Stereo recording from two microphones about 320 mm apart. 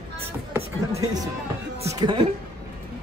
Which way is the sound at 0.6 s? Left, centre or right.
Centre.